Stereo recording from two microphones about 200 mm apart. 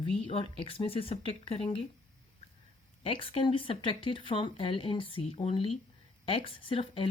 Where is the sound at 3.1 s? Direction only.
25° left (ahead or behind).